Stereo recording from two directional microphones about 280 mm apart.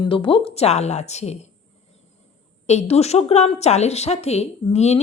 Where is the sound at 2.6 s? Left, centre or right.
Left.